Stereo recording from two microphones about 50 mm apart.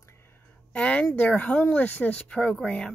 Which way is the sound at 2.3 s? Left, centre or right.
Centre.